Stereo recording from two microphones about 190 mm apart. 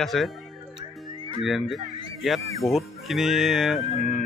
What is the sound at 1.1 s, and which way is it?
Music, 25° right (ahead or behind).